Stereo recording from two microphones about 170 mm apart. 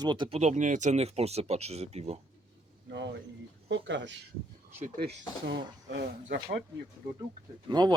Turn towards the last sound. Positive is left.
turn(degrees=-25)  # may be behind; listen again after turning